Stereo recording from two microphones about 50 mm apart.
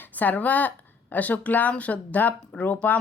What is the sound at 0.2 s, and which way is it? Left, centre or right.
A woman's voice, left.